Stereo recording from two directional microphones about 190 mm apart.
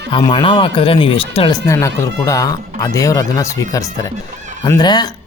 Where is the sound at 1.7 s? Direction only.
15° left (ahead or behind).